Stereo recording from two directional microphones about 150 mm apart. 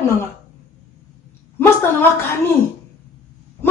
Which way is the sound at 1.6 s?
15° left (ahead or behind).